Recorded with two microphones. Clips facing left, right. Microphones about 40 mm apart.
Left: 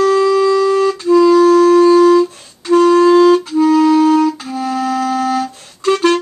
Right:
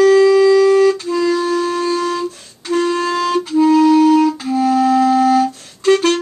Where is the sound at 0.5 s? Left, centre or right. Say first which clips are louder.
Right 2 dB; centre.